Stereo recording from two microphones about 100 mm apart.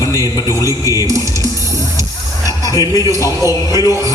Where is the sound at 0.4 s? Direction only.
40° left (ahead or behind).